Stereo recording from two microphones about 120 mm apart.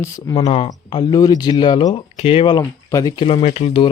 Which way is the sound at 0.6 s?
35° left (ahead or behind).